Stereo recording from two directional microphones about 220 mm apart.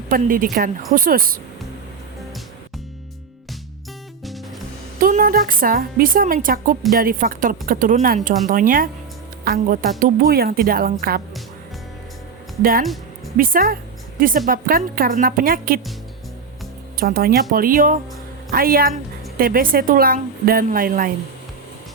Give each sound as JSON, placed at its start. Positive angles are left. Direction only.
{"t": 0.1, "sound": "a woman's voice", "side_deg": -40}
{"t": 4.9, "sound": "a woman's voice", "side_deg": -40}
{"t": 12.8, "sound": "music", "side_deg": 0}
{"t": 13.3, "sound": "a woman's voice", "side_deg": -40}
{"t": 17.0, "sound": "a woman's voice", "side_deg": -40}